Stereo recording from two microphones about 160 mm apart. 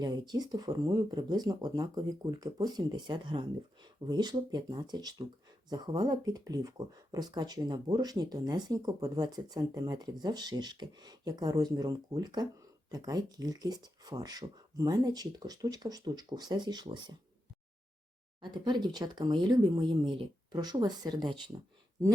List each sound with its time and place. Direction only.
0.0 s speech: 25° right (ahead or behind)
18.4 s speech: 30° right (ahead or behind)